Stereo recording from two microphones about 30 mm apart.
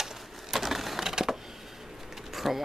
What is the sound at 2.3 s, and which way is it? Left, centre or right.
Pigeon, centre.